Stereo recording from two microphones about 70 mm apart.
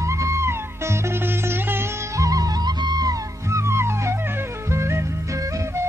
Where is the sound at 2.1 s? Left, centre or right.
Right.